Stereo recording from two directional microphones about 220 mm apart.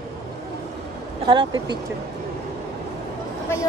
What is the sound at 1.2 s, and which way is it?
Speech, 25° right (ahead or behind).